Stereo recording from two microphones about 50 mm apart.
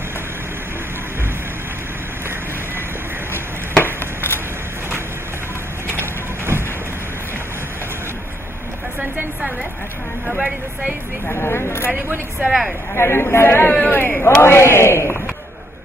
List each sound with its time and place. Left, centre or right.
3.7 s a sound: left
5.9 s vehicle: right
10.2 s speech: centre
11.2 s a man's voice: left
12.4 s speech: centre
12.9 s a man's voice: left
14.2 s a man's voice: left